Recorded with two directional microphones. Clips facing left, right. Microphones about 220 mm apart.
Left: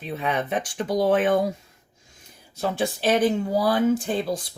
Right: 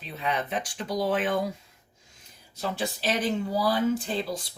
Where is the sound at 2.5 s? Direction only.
50° left (ahead or behind).